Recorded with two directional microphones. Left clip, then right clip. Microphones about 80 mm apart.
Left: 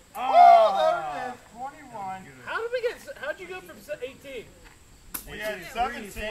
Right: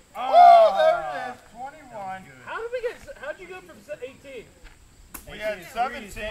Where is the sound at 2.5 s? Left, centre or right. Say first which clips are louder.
Left 1 dB; left.